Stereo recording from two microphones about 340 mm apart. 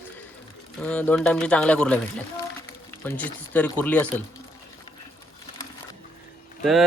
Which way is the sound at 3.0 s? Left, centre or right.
Centre.